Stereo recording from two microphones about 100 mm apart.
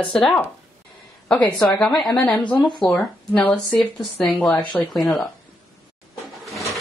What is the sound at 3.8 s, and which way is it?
Speech, 5° left (ahead or behind).